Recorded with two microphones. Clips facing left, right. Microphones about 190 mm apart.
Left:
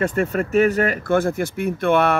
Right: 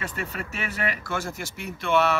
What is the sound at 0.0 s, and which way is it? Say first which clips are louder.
Speech: left 13 dB; 50° left (ahead or behind).